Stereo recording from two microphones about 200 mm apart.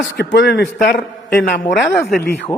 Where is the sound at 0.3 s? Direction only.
60° left (ahead or behind).